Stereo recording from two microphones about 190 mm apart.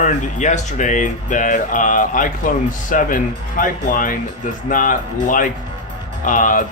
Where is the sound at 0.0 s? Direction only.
40° left (ahead or behind).